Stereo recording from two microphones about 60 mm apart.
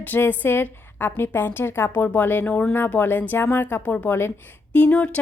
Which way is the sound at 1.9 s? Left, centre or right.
Left.